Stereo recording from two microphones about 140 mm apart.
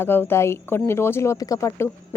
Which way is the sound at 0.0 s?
15° left (ahead or behind).